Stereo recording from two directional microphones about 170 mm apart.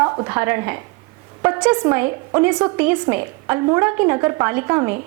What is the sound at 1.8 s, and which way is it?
A woman's voice, 15° right (ahead or behind).